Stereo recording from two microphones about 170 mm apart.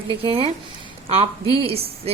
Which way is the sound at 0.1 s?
30° right (ahead or behind).